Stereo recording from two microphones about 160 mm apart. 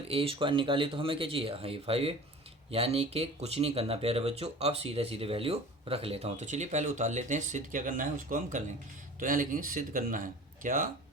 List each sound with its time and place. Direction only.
0.1 s speech: 35° right (ahead or behind); by 10.8 s 55° right (ahead or behind)